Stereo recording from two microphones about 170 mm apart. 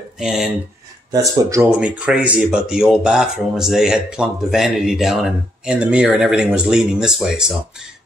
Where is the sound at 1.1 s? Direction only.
20° right (ahead or behind).